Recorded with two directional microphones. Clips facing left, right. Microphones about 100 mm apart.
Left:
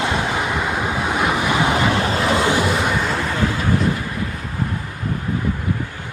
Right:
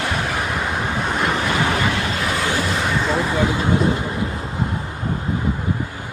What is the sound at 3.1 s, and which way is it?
Vehicle, 15° right (ahead or behind).